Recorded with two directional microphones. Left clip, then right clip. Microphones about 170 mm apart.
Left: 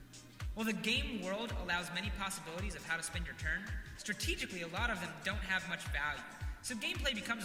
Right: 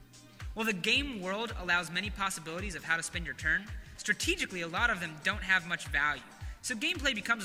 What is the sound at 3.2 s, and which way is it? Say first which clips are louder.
A man's voice: right 8 dB; 30° right (ahead or behind).